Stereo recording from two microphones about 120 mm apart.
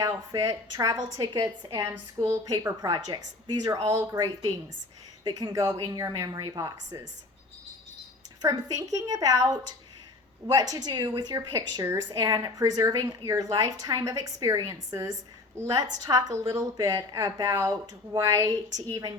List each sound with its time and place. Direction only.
0.0 s a woman's voice: 30° right (ahead or behind)
8.4 s a woman's voice: 30° right (ahead or behind)